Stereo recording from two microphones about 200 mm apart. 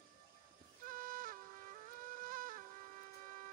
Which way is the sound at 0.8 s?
45° right (ahead or behind).